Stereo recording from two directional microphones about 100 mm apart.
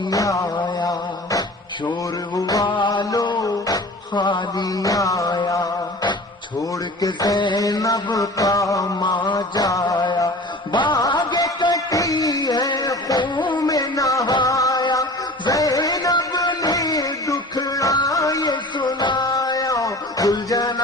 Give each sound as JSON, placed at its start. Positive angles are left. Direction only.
{"t": 0.1, "sound": "a sound", "side_deg": 35}
{"t": 0.8, "sound": "music", "side_deg": 40}
{"t": 7.0, "sound": "mantra", "side_deg": 40}
{"t": 7.3, "sound": "mantra", "side_deg": 50}
{"t": 7.6, "sound": "mantra", "side_deg": 35}
{"t": 8.1, "sound": "music", "side_deg": 35}
{"t": 13.2, "sound": "music", "side_deg": 50}
{"t": 13.7, "sound": "a sound", "side_deg": 35}
{"t": 14.4, "sound": "music", "side_deg": 35}